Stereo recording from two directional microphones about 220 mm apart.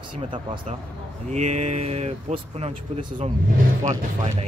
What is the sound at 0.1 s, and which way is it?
Speech, 20° right (ahead or behind).